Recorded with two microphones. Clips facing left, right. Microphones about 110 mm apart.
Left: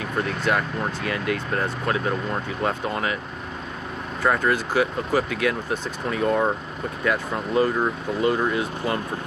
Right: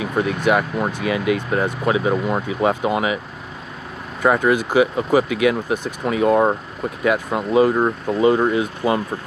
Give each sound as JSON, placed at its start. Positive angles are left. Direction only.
{"t": 0.0, "sound": "speech", "side_deg": -10}
{"t": 4.2, "sound": "speech", "side_deg": -15}
{"t": 7.7, "sound": "speech", "side_deg": -25}